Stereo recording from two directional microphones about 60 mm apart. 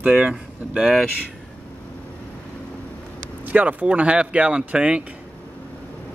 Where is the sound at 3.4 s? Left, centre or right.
Right.